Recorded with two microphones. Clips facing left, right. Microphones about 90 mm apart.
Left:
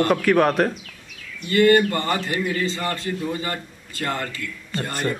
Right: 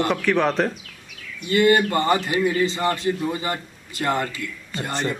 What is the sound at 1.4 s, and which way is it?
A man's voice, 15° right (ahead or behind).